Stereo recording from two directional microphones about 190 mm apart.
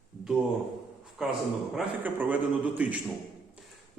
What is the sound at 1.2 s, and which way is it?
A man's voice, centre (ahead or behind).